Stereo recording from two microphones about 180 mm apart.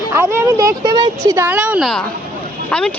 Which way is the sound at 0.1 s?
15° right (ahead or behind).